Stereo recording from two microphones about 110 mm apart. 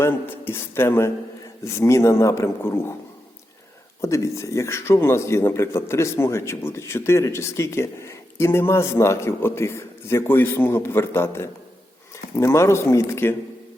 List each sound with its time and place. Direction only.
0.0 s speech: 20° left (ahead or behind)
4.0 s speech: 25° left (ahead or behind)